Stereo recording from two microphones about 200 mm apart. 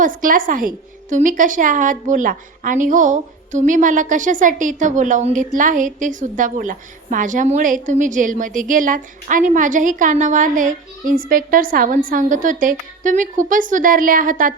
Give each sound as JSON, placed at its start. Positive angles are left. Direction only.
{"t": 0.0, "sound": "a woman's voice", "side_deg": -45}